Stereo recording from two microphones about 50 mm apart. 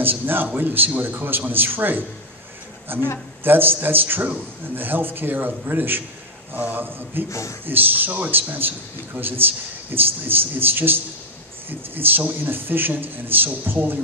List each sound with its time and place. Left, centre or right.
0.0 s a man's voice: right
7.2 s speech: left
7.6 s a man's voice: right